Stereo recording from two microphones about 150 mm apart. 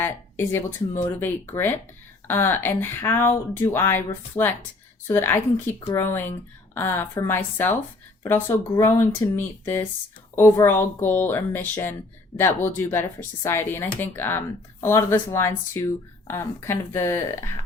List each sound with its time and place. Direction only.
0.0 s speech: 15° left (ahead or behind)